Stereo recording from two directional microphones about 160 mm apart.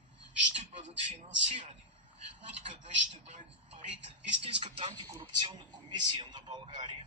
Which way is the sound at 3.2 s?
40° right (ahead or behind).